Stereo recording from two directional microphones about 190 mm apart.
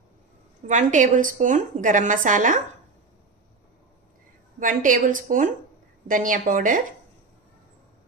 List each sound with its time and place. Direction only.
0.7 s a woman's voice: 40° right (ahead or behind)
4.6 s a woman's voice: 45° right (ahead or behind)